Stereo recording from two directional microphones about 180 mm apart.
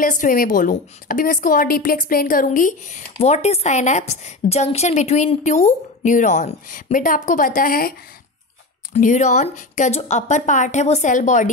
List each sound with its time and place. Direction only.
0.0 s a woman's voice: 45° left (ahead or behind)
8.9 s speech: 40° left (ahead or behind)